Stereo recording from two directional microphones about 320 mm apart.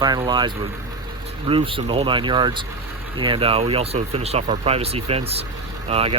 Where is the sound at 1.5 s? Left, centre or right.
Centre.